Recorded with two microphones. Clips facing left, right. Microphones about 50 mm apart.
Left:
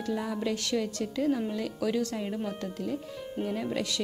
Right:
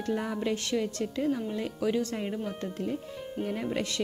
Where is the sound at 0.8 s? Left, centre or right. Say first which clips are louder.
Even; centre.